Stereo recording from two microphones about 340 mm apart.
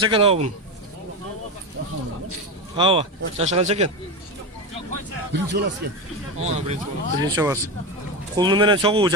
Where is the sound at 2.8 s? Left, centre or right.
Centre.